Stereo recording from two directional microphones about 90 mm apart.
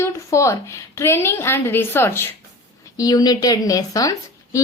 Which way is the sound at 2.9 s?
45° left (ahead or behind).